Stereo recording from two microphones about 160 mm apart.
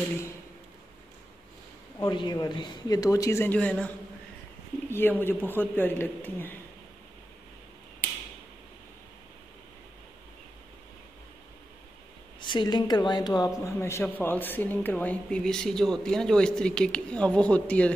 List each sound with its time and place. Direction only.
2.0 s a woman's voice: 30° left (ahead or behind); by 6.5 s 10° left (ahead or behind)
12.4 s a woman's voice: 30° left (ahead or behind); by 17.9 s 10° left (ahead or behind)